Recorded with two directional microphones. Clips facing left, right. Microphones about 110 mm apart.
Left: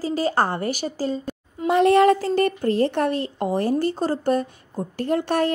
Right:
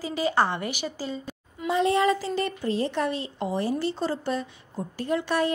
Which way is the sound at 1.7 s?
60° left (ahead or behind).